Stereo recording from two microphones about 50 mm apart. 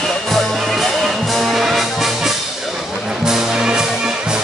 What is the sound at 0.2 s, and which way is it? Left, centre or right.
Music, centre.